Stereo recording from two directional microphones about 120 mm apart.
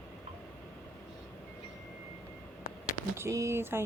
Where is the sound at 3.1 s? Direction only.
25° right (ahead or behind).